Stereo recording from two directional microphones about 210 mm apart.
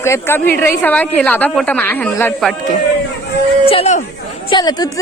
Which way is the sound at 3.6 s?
30° left (ahead or behind).